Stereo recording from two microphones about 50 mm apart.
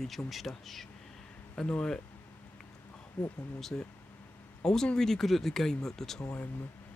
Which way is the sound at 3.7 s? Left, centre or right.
Left.